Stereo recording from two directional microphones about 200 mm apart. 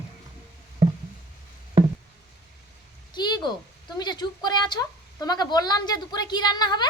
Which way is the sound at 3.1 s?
20° left (ahead or behind).